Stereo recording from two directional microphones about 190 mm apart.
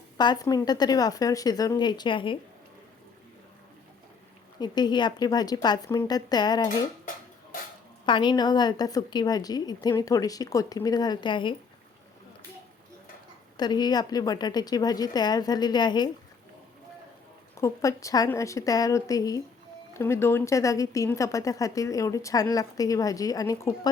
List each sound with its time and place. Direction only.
0.2 s a woman's voice: 20° left (ahead or behind)
4.6 s a woman's voice: 20° left (ahead or behind)
8.0 s a woman's voice: 25° left (ahead or behind)
13.6 s a woman's voice: 20° left (ahead or behind)
17.6 s a woman's voice: 15° left (ahead or behind)